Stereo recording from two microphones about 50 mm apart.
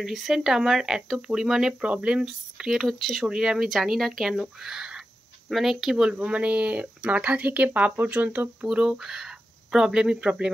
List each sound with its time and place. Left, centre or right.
0.0 s speech: centre
1.8 s speech: right
2.2 s speech: centre
3.3 s speech: centre
6.0 s speech: right
8.6 s speech: centre